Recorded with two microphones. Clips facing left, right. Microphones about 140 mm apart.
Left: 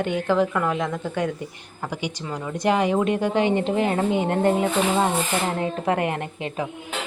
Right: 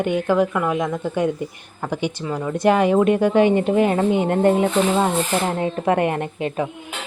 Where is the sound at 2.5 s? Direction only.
20° left (ahead or behind).